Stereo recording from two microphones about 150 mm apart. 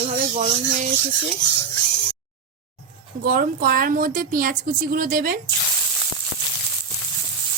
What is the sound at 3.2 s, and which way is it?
A woman's voice, 75° right (ahead or behind).